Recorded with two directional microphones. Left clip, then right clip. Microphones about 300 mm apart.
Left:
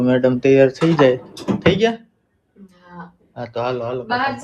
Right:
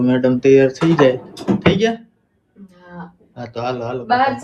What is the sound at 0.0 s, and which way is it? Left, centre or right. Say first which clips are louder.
Speech: right 1 dB; centre.